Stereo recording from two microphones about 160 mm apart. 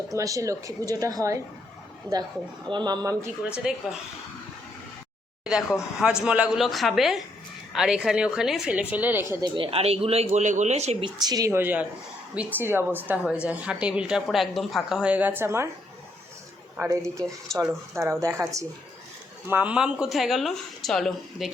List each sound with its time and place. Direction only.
0.1 s a woman's voice: 20° right (ahead or behind)
2.6 s a woman's voice: 30° right (ahead or behind)
3.5 s speech: 5° right (ahead or behind)
6.0 s speech: 5° right (ahead or behind)
9.6 s speech: 35° right (ahead or behind)
11.0 s speech: 25° right (ahead or behind)
16.7 s speech: 15° right (ahead or behind); by 21.5 s centre (ahead or behind)